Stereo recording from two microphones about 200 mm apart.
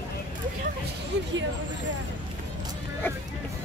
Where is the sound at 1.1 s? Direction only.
60° right (ahead or behind).